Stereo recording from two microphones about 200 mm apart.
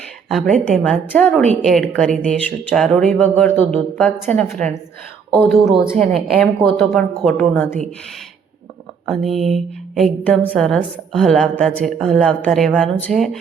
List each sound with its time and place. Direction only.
0.3 s a woman's voice: centre (ahead or behind)
6.0 s a woman's voice: 35° right (ahead or behind)
6.4 s a woman's voice: 5° left (ahead or behind)
9.0 s a woman's voice: centre (ahead or behind)